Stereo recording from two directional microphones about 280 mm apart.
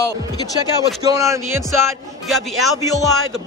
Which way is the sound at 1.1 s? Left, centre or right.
Centre.